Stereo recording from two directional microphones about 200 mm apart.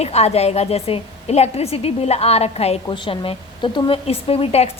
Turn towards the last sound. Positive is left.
turn(degrees=30)  # may be behind; listen again after turning